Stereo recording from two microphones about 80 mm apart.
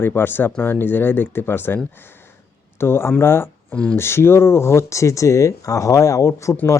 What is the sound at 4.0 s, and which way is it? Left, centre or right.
Speech, left.